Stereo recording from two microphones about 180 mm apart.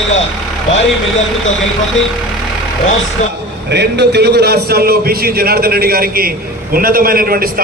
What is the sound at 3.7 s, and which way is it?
A man's voice, 70° right (ahead or behind).